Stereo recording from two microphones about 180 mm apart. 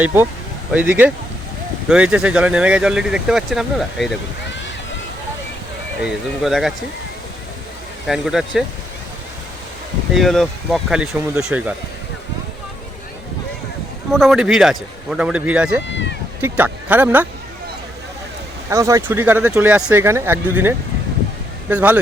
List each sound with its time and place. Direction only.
0.0 s speech: 10° right (ahead or behind)
6.0 s speech: centre (ahead or behind)
8.0 s speech: centre (ahead or behind)
10.1 s speech: centre (ahead or behind)
14.1 s speech: centre (ahead or behind)
15.9 s speech: 90° left
16.4 s speech: 10° right (ahead or behind)
18.7 s speech: 15° right (ahead or behind)